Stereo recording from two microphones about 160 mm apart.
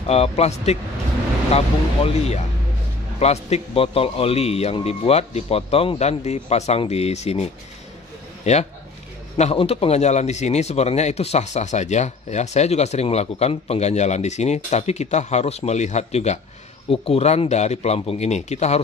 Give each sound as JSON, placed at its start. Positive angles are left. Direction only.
{"t": 0.1, "sound": "a man's voice", "side_deg": 40}
{"t": 2.0, "sound": "a man's voice", "side_deg": 45}
{"t": 8.5, "sound": "speech", "side_deg": 45}